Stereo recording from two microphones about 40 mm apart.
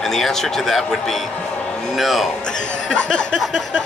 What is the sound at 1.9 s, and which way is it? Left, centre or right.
Speech, centre.